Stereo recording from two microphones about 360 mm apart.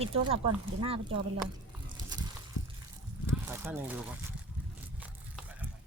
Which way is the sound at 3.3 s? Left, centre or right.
Centre.